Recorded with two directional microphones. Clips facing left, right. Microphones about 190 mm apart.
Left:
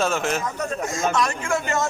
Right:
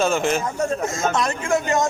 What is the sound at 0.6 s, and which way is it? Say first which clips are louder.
A man's voice: right 3 dB; 25° right (ahead or behind).